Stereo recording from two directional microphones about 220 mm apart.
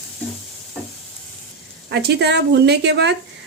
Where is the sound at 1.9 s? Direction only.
50° right (ahead or behind).